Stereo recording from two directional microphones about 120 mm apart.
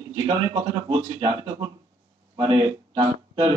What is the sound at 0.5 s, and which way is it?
Speech, 40° right (ahead or behind).